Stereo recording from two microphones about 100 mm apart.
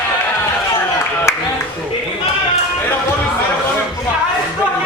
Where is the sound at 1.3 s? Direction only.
25° left (ahead or behind).